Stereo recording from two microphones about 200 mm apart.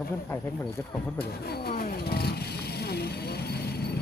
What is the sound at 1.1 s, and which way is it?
Vehicle, 50° left (ahead or behind).